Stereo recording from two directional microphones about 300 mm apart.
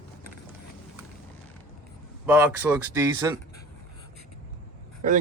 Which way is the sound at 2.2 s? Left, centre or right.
Centre.